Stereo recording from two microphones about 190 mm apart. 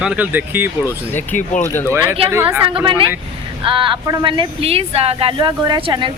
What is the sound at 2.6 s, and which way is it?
A woman's voice, 25° right (ahead or behind).